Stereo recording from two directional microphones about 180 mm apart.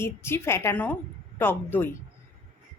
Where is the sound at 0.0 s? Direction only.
15° left (ahead or behind).